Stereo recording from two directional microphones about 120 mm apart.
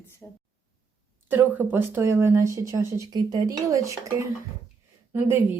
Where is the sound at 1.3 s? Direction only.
15° right (ahead or behind).